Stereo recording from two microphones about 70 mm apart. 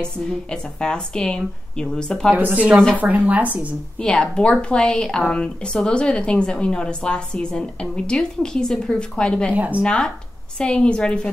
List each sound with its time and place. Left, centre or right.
0.0 s speech: centre
2.3 s speech: right
4.0 s speech: centre
9.5 s speech: right
9.8 s speech: centre